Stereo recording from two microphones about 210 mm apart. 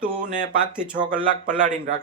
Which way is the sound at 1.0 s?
40° right (ahead or behind).